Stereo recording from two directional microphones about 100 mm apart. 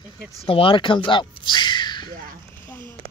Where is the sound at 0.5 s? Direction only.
65° left (ahead or behind).